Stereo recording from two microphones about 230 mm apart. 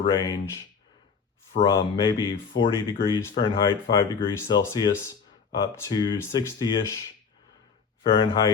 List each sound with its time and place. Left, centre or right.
0.0 s speech: centre
1.6 s speech: centre
8.0 s speech: centre